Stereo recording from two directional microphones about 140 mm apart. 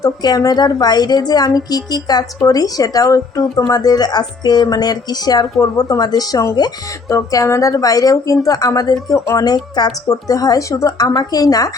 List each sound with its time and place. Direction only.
0.0 s a woman's voice: 25° left (ahead or behind)